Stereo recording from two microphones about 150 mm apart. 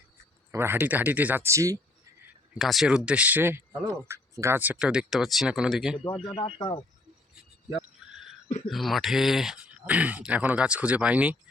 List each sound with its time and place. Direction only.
0.5 s speech: 15° right (ahead or behind)
2.6 s speech: centre (ahead or behind)
6.1 s speech: 35° left (ahead or behind)
8.7 s speech: centre (ahead or behind)